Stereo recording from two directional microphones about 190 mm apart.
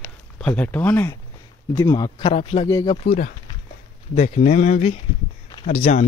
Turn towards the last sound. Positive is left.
turn(degrees=40)  # may be behind; listen again after turning